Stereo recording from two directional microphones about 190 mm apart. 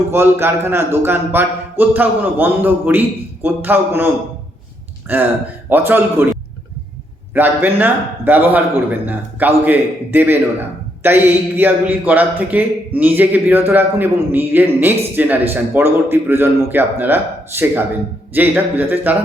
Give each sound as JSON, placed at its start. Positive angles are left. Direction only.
{"t": 0.1, "sound": "a man's voice", "side_deg": -10}
{"t": 7.3, "sound": "a man's voice", "side_deg": -10}